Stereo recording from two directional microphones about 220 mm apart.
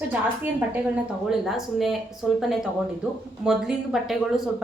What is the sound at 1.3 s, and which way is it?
A woman's voice, centre (ahead or behind).